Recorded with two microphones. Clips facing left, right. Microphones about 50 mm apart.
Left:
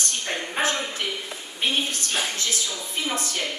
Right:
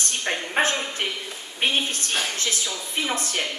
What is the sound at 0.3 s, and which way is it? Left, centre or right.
Speech, right.